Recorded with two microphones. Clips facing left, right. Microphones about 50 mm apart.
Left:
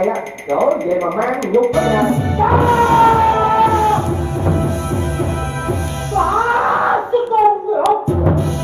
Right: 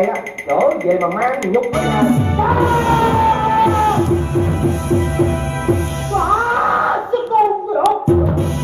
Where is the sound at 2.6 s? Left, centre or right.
Left.